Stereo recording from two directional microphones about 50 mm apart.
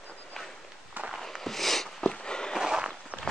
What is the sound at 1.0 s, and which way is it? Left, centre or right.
Walk, right.